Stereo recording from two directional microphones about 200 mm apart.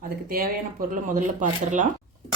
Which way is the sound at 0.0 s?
45° right (ahead or behind).